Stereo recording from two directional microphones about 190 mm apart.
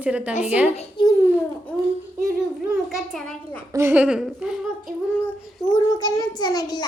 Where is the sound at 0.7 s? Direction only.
35° left (ahead or behind).